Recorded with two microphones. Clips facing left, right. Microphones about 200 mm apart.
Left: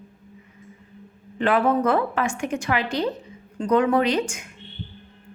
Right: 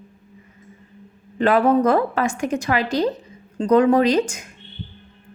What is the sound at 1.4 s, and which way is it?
A woman's voice, 40° right (ahead or behind).